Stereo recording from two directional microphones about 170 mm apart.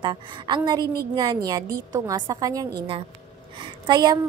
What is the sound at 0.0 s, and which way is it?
A woman's voice, 25° right (ahead or behind).